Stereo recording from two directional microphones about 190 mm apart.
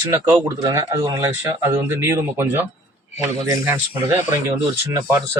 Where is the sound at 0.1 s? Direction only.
15° right (ahead or behind).